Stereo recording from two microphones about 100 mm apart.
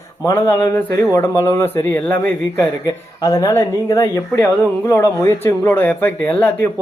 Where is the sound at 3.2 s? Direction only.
35° left (ahead or behind); by 6.7 s 20° left (ahead or behind).